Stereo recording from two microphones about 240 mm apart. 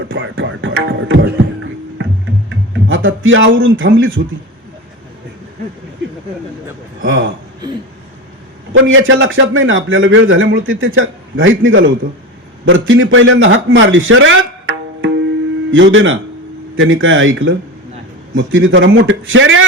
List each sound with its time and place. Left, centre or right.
0.0 s a man's voice: right
2.5 s speech: right
7.0 s a man's voice: right
8.7 s a man's voice: right